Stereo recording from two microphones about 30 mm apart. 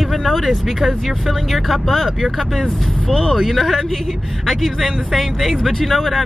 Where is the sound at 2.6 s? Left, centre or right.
Centre.